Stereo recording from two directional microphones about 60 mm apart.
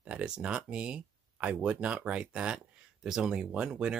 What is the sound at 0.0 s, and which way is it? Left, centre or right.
Speech, centre.